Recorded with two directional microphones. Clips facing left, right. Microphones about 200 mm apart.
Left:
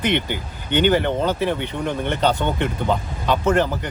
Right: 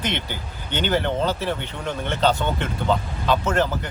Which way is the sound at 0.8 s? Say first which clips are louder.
Left 2 dB; 15° left (ahead or behind).